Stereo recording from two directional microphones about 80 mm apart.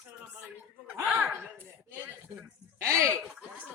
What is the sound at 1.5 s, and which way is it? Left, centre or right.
Chopping, right.